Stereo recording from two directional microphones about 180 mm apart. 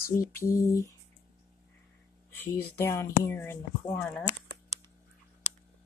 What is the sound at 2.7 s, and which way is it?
Speech, 15° left (ahead or behind).